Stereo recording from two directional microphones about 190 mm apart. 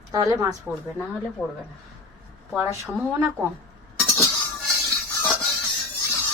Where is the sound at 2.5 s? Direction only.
5° right (ahead or behind).